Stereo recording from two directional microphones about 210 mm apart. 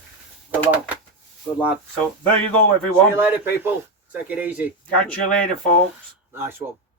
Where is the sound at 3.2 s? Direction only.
10° right (ahead or behind).